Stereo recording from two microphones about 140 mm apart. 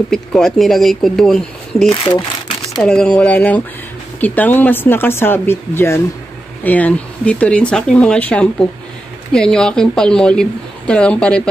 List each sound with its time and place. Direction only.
0.1 s speech: 5° left (ahead or behind)
1.9 s speech: 35° left (ahead or behind)
2.8 s speech: 5° left (ahead or behind)